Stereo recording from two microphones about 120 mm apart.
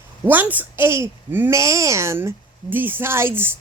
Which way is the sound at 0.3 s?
15° right (ahead or behind).